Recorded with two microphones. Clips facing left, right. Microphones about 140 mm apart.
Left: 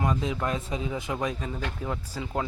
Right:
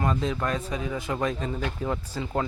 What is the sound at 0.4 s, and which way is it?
Speech, 20° left (ahead or behind).